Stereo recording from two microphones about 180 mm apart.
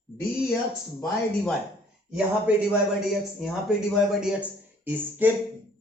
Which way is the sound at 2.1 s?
5° right (ahead or behind).